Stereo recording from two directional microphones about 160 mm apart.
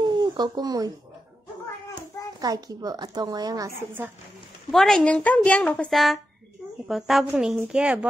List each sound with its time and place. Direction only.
0.0 s a sound: 25° right (ahead or behind)
2.4 s a woman's voice: 25° right (ahead or behind)
4.6 s a woman's voice: centre (ahead or behind)